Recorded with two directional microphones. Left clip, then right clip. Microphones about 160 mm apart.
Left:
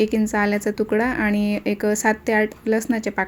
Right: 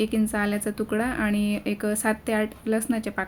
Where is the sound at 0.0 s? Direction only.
25° left (ahead or behind).